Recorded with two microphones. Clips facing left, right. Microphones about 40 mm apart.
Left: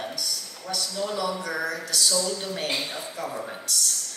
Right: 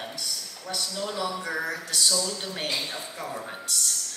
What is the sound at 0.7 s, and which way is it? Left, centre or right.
A woman's voice, right.